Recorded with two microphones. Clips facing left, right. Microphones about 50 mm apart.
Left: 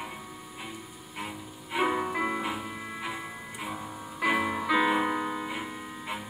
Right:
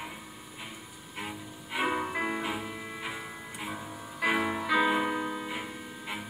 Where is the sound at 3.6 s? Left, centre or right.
Centre.